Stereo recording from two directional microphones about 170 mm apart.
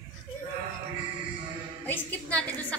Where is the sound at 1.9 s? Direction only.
10° left (ahead or behind).